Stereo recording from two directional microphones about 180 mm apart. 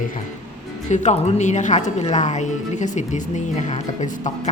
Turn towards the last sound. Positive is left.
turn(degrees=45)  # may be behind; listen again after turning